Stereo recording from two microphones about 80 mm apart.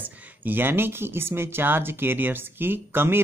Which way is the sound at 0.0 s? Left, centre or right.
Right.